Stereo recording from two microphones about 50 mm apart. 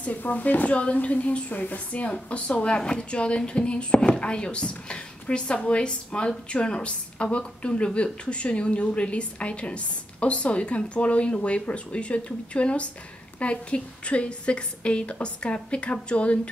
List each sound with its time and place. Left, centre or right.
0.0 s a woman's voice: left